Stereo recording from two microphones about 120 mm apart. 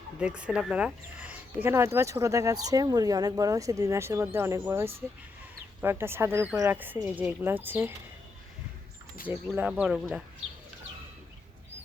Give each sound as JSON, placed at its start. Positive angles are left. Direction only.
{"t": 0.2, "sound": "speech", "side_deg": -10}
{"t": 9.6, "sound": "speech", "side_deg": -10}